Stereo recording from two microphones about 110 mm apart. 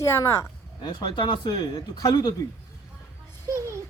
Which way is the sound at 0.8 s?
45° left (ahead or behind).